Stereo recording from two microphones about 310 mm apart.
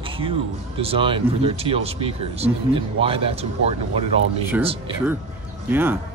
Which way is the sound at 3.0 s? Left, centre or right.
Centre.